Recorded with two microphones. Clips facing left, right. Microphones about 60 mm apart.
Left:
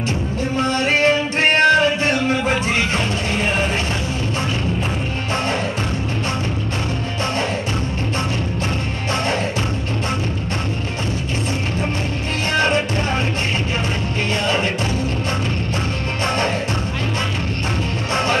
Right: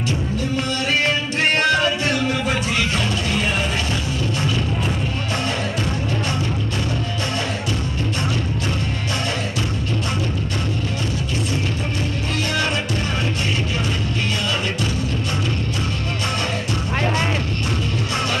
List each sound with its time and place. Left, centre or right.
0.6 s music: left
12.5 s music: left